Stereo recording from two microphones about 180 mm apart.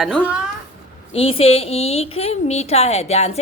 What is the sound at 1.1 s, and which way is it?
Speech, 30° left (ahead or behind).